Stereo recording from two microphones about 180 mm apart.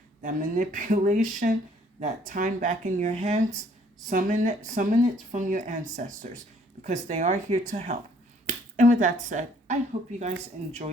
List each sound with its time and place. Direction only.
0.2 s speech: 45° right (ahead or behind)